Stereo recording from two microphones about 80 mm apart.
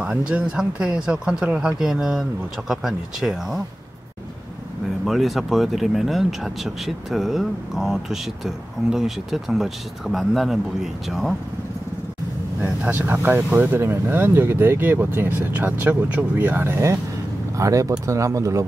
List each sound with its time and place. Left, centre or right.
0.0 s speech: centre
5.0 s speech: centre
12.6 s speech: centre
17.6 s speech: right